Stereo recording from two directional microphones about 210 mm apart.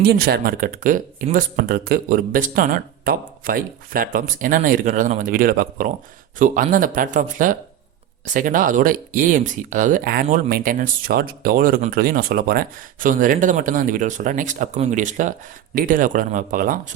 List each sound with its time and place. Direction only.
0.0 s speech: 50° right (ahead or behind)